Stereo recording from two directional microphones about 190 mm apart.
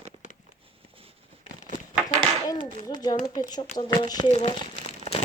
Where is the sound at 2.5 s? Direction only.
20° left (ahead or behind).